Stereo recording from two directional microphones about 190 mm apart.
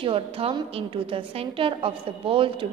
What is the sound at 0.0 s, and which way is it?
A woman's voice, 30° right (ahead or behind).